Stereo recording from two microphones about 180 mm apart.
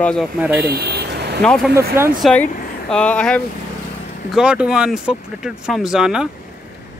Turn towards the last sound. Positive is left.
turn(degrees=-5)  # may be behind; listen again after turning